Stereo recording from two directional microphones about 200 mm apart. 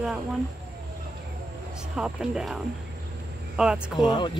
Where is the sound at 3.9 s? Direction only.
20° left (ahead or behind).